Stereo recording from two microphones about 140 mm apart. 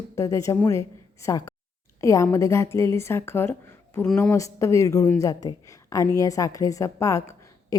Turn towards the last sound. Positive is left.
turn(degrees=20)  # may be behind; listen again after turning